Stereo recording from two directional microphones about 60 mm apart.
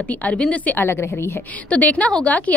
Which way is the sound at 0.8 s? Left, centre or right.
Left.